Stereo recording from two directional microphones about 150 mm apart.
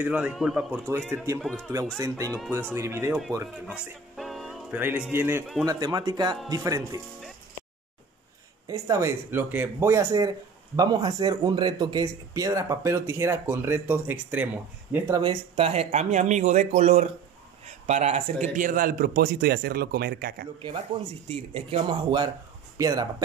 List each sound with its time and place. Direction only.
0.0 s speech: 10° right (ahead or behind)
0.7 s speech: 15° right (ahead or behind)
1.4 s speech: 5° left (ahead or behind)
2.0 s speech: 20° right (ahead or behind)
3.7 s music: centre (ahead or behind)
4.7 s speech: 10° right (ahead or behind)
5.7 s speech: 25° right (ahead or behind)
8.6 s speech: 20° right (ahead or behind)
15.1 s a man's voice: 35° right (ahead or behind); by 20.4 s 90° right
20.9 s speech: 30° right (ahead or behind)
22.8 s speech: 25° right (ahead or behind)